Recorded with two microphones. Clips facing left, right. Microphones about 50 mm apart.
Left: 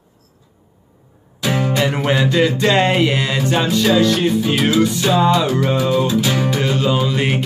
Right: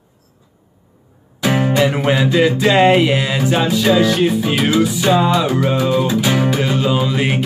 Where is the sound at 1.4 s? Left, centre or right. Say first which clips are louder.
Right 3 dB; right.